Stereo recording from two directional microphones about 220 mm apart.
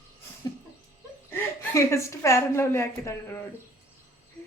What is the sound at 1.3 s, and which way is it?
A woman's voice, 15° left (ahead or behind).